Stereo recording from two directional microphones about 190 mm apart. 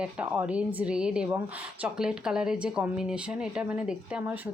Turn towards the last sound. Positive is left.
turn(degrees=-5)  # may be behind; listen again after turning